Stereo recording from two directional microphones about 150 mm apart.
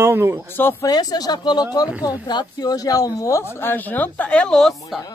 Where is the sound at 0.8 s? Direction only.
25° left (ahead or behind).